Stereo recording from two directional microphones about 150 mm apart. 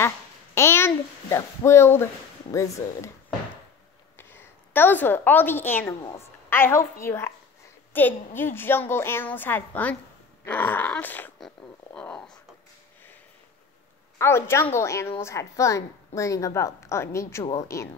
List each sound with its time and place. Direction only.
0.6 s speech: 15° left (ahead or behind)
4.2 s a woman's voice: 15° left (ahead or behind)
14.1 s a woman's voice: 15° left (ahead or behind)